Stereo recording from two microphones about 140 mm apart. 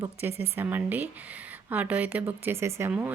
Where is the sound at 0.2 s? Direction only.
15° right (ahead or behind).